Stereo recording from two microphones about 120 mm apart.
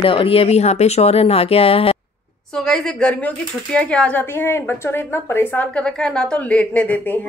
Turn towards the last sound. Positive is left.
turn(degrees=10)  # may be behind; listen again after turning